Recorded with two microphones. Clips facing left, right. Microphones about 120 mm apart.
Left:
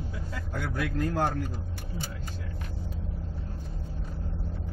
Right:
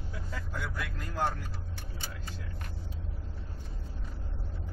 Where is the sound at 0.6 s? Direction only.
55° left (ahead or behind).